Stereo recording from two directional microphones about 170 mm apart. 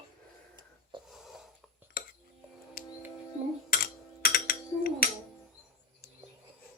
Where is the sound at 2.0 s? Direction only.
55° left (ahead or behind).